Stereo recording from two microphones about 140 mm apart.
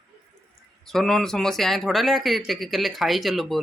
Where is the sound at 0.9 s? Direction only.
Centre (ahead or behind).